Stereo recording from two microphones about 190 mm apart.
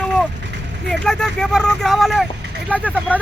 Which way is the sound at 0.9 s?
5° left (ahead or behind).